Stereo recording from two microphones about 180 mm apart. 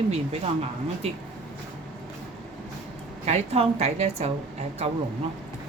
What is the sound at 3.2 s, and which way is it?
A woman's voice, 40° right (ahead or behind).